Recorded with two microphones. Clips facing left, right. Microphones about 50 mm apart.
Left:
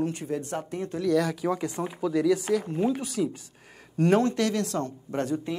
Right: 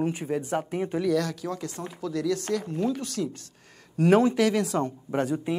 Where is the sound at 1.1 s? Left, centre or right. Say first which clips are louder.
Left 6 dB; centre.